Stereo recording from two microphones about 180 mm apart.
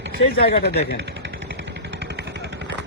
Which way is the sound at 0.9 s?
75° right (ahead or behind).